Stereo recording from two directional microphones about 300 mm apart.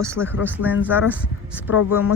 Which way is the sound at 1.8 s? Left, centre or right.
Left.